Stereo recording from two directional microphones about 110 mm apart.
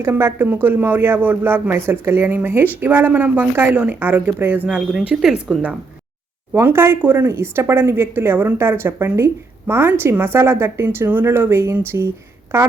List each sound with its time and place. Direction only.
0.0 s speech: 20° right (ahead or behind)
4.8 s speech: 5° right (ahead or behind)
6.5 s speech: 20° right (ahead or behind)